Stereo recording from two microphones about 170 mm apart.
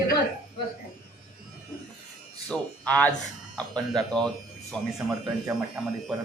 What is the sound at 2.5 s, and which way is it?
Speech, 5° left (ahead or behind).